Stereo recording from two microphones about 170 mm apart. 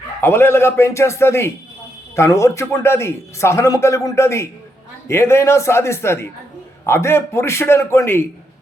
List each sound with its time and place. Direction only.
0.2 s a man's voice: 15° left (ahead or behind)